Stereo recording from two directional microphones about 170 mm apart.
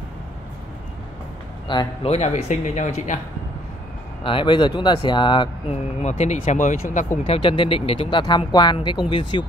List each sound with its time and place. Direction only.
1.7 s speech: 25° left (ahead or behind)
2.0 s speech: 40° left (ahead or behind)
4.2 s speech: 30° left (ahead or behind)
6.0 s speech: 45° left (ahead or behind)
7.2 s speech: 30° left (ahead or behind)